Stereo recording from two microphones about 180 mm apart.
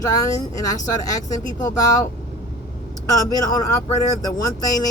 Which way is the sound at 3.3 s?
20° left (ahead or behind).